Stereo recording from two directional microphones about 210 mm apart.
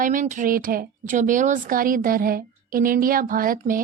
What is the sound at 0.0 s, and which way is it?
A woman's voice, 40° right (ahead or behind).